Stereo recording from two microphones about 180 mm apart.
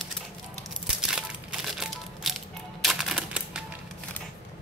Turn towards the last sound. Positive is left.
turn(degrees=-5)  # may be behind; listen again after turning